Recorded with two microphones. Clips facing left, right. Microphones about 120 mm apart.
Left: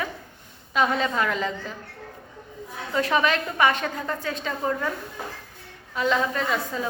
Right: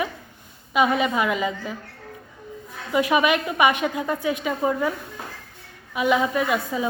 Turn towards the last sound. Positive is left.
turn(degrees=-10)  # may be behind; listen again after turning